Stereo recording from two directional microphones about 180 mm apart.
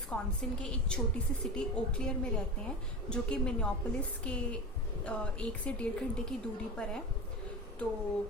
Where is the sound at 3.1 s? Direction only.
5° left (ahead or behind).